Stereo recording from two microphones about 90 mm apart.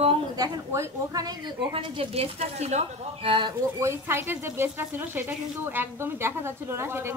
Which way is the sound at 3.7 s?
30° right (ahead or behind).